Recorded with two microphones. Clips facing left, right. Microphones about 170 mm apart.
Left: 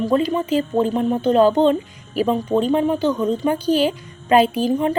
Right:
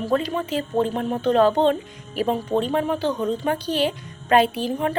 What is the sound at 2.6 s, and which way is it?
Speech, 35° left (ahead or behind).